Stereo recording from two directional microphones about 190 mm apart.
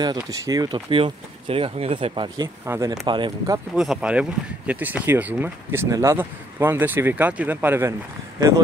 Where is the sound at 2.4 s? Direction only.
15° right (ahead or behind).